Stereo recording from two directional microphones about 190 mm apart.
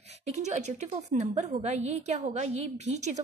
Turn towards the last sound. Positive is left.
turn(degrees=-35)  # may be behind; listen again after turning